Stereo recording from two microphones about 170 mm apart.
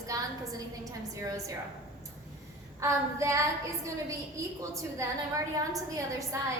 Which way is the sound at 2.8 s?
20° right (ahead or behind).